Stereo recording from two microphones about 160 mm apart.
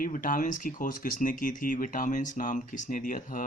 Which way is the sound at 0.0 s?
55° left (ahead or behind).